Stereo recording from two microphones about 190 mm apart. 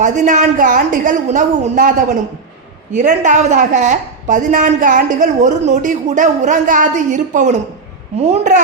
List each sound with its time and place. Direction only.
0.0 s a woman's voice: 40° right (ahead or behind)
2.9 s a woman's voice: 40° right (ahead or behind)